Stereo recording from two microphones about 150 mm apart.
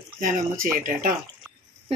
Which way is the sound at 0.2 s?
65° right (ahead or behind).